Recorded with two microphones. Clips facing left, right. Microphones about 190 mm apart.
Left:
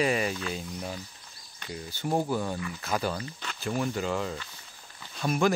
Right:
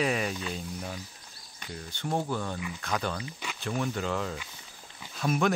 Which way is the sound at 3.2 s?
10° right (ahead or behind).